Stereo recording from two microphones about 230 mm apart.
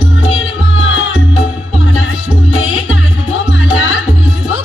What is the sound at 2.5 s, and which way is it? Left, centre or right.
Music, left.